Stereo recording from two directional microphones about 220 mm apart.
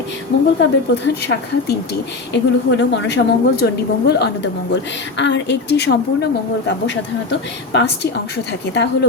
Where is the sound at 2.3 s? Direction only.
55° left (ahead or behind).